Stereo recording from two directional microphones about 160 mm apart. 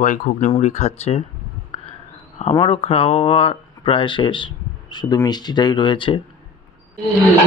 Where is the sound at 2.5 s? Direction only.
35° left (ahead or behind).